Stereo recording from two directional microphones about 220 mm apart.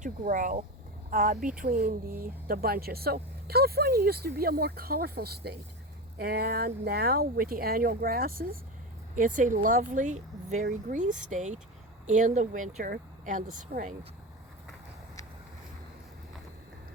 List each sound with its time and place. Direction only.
0.0 s speech: 40° right (ahead or behind)